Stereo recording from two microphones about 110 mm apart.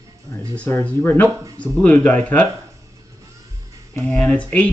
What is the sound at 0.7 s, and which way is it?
Speech, 20° left (ahead or behind).